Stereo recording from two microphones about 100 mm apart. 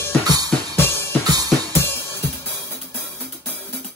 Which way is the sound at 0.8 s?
25° left (ahead or behind).